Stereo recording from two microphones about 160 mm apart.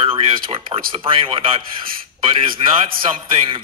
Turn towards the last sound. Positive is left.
turn(degrees=-35)  # may be behind; listen again after turning